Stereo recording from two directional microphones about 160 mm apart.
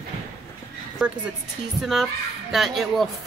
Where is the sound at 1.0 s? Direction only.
5° right (ahead or behind).